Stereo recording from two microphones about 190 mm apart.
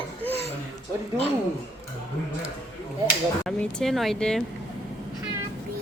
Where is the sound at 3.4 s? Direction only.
5° left (ahead or behind).